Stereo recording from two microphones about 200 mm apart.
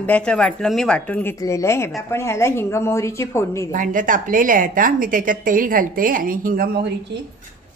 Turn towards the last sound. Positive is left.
turn(degrees=-55)  # may be behind; listen again after turning